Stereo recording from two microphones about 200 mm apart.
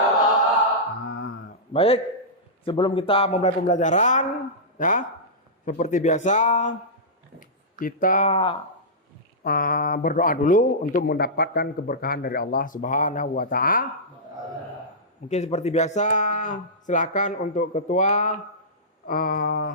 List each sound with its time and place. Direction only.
1.0 s a sound: 50° left (ahead or behind)
1.7 s speech: 30° left (ahead or behind)
8.3 s speech: 25° left (ahead or behind)
9.4 s speech: 45° left (ahead or behind)
15.3 s speech: 35° left (ahead or behind)